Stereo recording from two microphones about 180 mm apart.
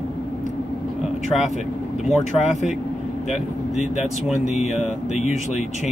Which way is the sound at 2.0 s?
Centre (ahead or behind).